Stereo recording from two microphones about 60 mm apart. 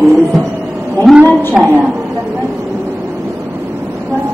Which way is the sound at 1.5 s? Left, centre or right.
Right.